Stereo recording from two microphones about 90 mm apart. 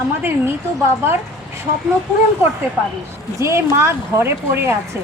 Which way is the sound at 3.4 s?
30° right (ahead or behind).